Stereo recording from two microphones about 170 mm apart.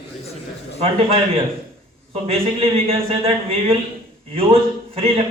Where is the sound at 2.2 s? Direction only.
35° right (ahead or behind).